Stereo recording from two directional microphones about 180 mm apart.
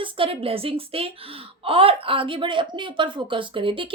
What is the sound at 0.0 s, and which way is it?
A woman's voice, 30° right (ahead or behind).